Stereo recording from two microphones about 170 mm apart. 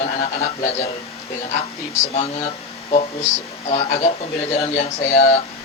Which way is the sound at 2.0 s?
40° left (ahead or behind).